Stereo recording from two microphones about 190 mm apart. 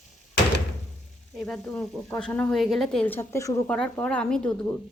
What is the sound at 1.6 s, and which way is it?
A woman's voice, 5° left (ahead or behind).